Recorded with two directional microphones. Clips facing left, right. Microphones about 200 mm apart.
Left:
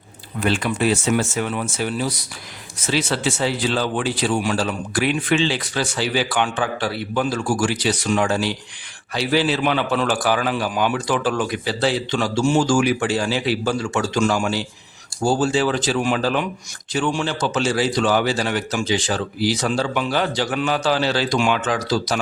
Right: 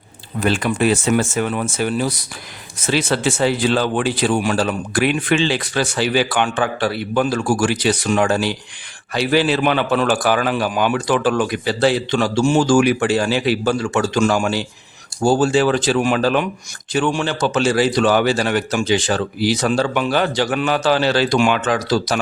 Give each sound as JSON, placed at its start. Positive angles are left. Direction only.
{"t": 0.3, "sound": "speech", "side_deg": -45}